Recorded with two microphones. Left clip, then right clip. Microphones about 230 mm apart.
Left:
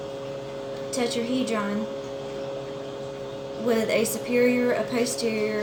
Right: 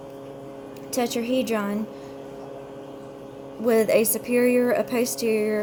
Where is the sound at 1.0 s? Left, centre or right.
Right.